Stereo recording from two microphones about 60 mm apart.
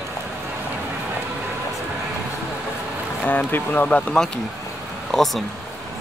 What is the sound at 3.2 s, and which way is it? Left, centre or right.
Speech, left.